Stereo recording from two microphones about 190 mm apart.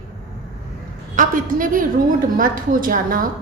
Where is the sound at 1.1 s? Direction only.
45° right (ahead or behind).